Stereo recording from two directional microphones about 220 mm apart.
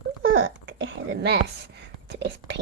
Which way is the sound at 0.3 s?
55° right (ahead or behind).